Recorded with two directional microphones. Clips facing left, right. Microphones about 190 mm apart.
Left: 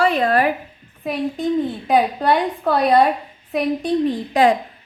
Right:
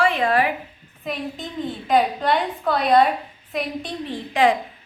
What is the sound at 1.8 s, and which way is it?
A woman's voice, 45° left (ahead or behind).